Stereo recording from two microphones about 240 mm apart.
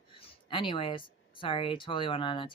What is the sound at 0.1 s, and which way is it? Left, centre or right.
Speech, left.